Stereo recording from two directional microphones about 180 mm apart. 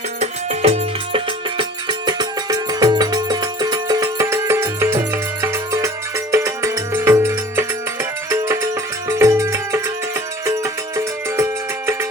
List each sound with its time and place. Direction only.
0.2 s music: 35° right (ahead or behind); by 11.4 s 15° right (ahead or behind)